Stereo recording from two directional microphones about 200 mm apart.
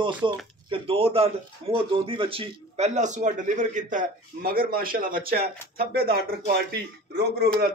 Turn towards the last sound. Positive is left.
turn(degrees=-55)  # may be behind; listen again after turning